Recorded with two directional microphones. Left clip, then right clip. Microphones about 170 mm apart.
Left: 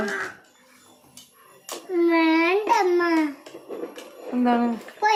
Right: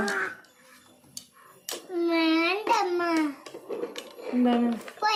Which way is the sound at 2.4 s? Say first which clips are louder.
Left 4 dB; 90° right.